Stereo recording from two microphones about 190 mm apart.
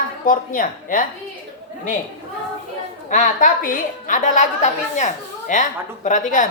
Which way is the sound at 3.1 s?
40° left (ahead or behind).